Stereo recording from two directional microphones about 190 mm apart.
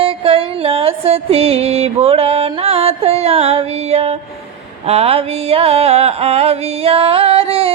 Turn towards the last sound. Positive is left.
turn(degrees=-30)  # may be behind; listen again after turning